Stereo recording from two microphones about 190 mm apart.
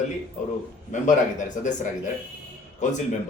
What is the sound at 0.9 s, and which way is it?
Speech, 40° left (ahead or behind).